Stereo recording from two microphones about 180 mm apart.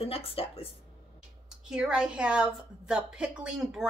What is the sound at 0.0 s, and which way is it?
Speech, 30° left (ahead or behind).